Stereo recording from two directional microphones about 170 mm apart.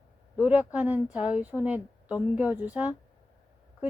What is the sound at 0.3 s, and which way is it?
A woman's voice, 10° right (ahead or behind).